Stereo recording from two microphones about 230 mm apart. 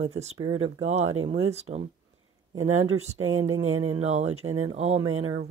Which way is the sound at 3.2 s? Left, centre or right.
Right.